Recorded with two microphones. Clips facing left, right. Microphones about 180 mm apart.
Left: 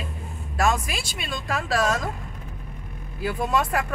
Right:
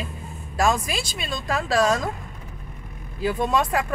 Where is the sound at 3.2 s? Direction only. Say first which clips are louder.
Right 3 dB; 5° left (ahead or behind).